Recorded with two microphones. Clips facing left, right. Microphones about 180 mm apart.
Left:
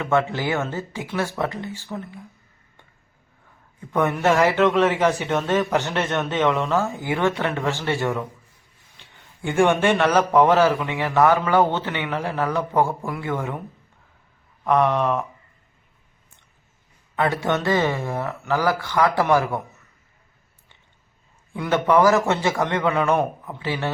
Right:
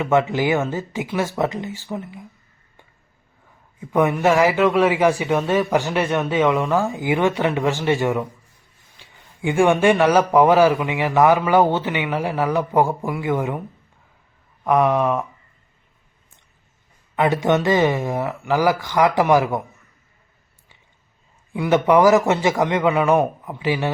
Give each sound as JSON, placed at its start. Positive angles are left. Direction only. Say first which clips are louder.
{"t": 0.0, "sound": "a man's voice", "louder": "right 3 dB", "side_deg": -15}
{"t": 3.8, "sound": "a man's voice", "louder": "right 3 dB", "side_deg": -10}
{"t": 9.4, "sound": "a man's voice", "louder": "right 2 dB", "side_deg": -10}
{"t": 14.6, "sound": "a man's voice", "louder": "right 2 dB", "side_deg": -10}
{"t": 17.2, "sound": "a man's voice", "louder": "right 4 dB", "side_deg": -15}
{"t": 21.5, "sound": "a man's voice", "louder": "right 3 dB", "side_deg": -10}